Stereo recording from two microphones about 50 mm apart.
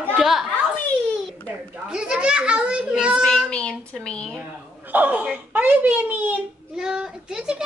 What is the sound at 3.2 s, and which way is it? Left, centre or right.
Speech, centre.